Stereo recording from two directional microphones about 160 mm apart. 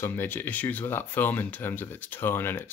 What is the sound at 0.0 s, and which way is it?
Speech, 10° left (ahead or behind).